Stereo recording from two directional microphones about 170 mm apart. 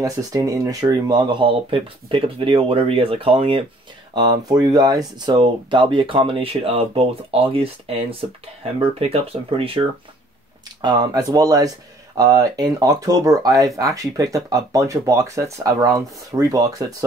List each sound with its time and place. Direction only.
0.0 s speech: 20° right (ahead or behind)
10.8 s speech: 25° right (ahead or behind)